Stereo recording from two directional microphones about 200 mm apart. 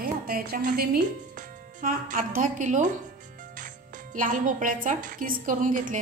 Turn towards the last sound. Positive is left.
turn(degrees=-40)  # may be behind; listen again after turning